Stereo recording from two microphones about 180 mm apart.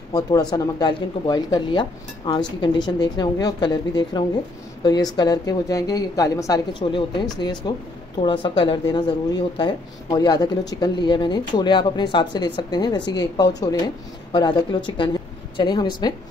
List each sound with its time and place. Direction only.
0.1 s speech: 20° left (ahead or behind)